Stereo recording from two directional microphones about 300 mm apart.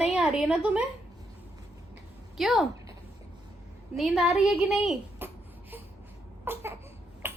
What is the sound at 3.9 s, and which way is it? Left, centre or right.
Speech, centre.